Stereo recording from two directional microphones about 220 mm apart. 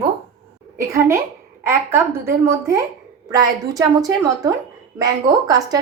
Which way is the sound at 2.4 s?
15° right (ahead or behind).